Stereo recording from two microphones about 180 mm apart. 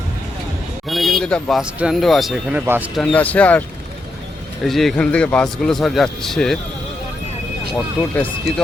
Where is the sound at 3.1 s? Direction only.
10° left (ahead or behind).